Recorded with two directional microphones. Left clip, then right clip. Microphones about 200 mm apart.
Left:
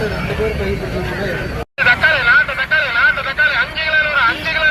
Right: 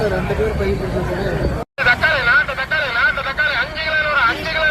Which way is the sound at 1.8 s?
65° right (ahead or behind).